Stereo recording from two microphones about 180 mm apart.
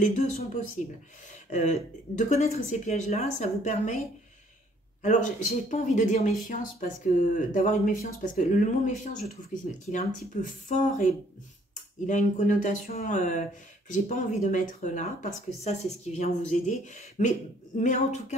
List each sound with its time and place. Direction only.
0.0 s speech: 40° left (ahead or behind)
5.0 s speech: 45° left (ahead or behind)
12.1 s speech: 45° left (ahead or behind)